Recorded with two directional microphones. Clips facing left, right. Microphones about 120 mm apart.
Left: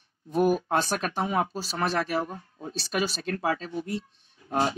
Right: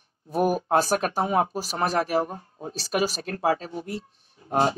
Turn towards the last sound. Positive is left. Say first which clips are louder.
# right 3 dB
turn(degrees=-30)  # may be behind; listen again after turning